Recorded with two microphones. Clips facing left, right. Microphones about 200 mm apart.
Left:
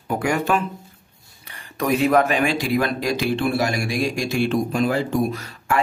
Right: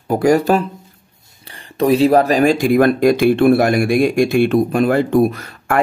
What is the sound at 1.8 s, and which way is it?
Speech, 30° right (ahead or behind).